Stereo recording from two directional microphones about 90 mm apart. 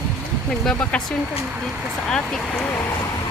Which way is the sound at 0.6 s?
15° left (ahead or behind).